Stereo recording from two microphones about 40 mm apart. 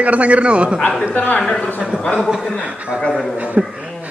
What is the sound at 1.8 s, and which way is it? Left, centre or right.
Speech, right.